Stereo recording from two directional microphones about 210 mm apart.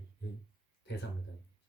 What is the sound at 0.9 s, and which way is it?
Speech, 55° left (ahead or behind).